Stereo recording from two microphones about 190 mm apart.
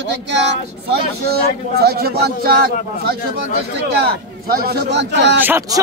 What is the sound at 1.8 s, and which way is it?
A man's voice, 55° right (ahead or behind).